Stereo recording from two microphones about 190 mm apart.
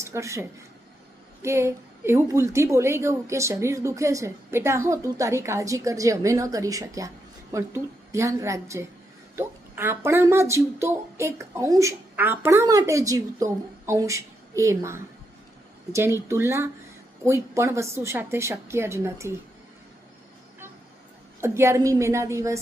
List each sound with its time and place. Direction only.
0.0 s a woman's voice: 15° right (ahead or behind)
21.4 s a woman's voice: 15° right (ahead or behind)